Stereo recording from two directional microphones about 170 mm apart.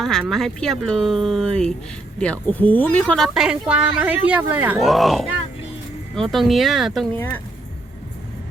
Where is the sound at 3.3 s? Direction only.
5° right (ahead or behind).